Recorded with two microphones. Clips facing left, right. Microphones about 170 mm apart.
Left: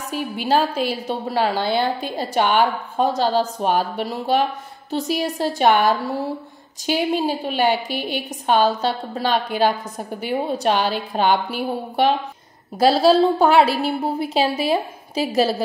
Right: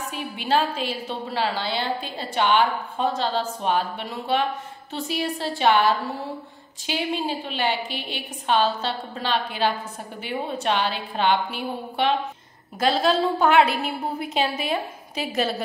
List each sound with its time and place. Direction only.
0.1 s a woman's voice: 40° left (ahead or behind)